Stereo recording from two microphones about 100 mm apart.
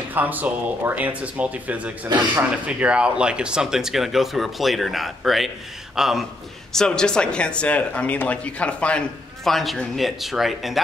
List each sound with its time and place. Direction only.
0.1 s speech: 20° right (ahead or behind)
6.7 s speech: 5° left (ahead or behind)